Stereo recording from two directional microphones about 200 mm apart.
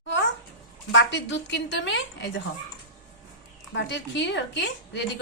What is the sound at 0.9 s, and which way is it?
A woman's voice, 65° left (ahead or behind).